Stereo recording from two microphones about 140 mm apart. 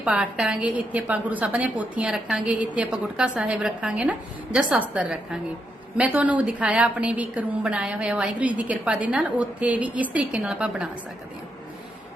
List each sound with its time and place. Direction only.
0.0 s a woman's voice: 10° right (ahead or behind)